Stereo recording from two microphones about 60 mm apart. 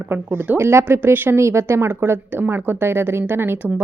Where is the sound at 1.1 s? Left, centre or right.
Right.